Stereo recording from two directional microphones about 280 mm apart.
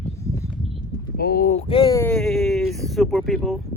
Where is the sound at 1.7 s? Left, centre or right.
Centre.